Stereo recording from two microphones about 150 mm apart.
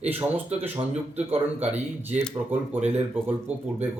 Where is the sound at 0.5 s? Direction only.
15° right (ahead or behind).